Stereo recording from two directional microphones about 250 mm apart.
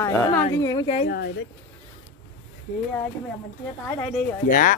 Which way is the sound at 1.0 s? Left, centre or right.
Left.